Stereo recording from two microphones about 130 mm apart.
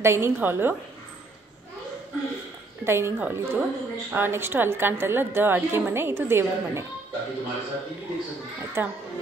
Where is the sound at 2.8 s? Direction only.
20° right (ahead or behind).